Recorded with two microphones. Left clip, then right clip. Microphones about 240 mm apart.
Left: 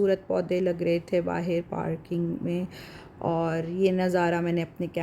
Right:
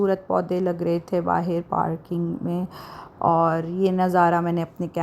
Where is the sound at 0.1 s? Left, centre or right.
Centre.